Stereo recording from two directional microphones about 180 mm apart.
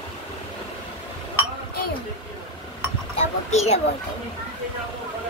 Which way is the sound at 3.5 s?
40° left (ahead or behind).